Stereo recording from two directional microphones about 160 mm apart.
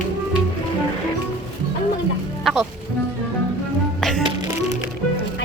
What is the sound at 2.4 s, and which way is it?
Music, centre (ahead or behind).